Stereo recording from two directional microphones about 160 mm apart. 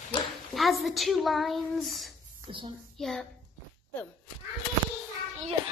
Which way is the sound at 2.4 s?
30° right (ahead or behind).